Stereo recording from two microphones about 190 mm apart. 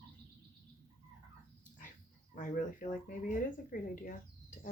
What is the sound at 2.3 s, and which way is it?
Speech, 45° left (ahead or behind).